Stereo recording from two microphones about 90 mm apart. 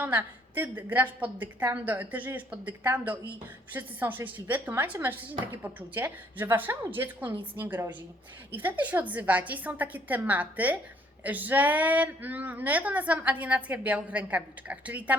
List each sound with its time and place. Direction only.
0.0 s a woman's voice: 20° right (ahead or behind)